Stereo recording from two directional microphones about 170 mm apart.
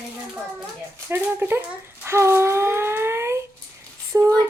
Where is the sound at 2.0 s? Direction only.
15° right (ahead or behind).